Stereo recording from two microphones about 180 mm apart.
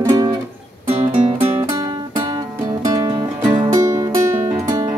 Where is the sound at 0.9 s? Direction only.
35° right (ahead or behind).